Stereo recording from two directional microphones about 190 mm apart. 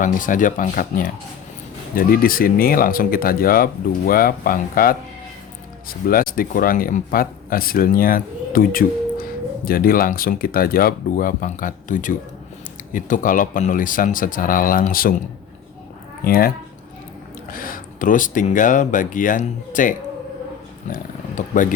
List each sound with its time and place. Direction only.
0.0 s speech: 45° left (ahead or behind)
6.1 s speech: 50° left (ahead or behind)
16.2 s speech: 50° left (ahead or behind)